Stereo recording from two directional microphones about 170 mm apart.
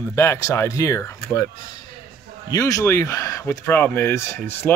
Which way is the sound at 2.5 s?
20° left (ahead or behind).